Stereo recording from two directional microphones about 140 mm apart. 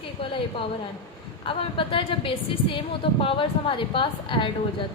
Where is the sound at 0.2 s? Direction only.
40° left (ahead or behind).